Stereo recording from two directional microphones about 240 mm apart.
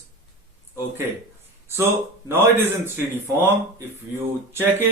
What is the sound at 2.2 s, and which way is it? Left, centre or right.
Speech, centre.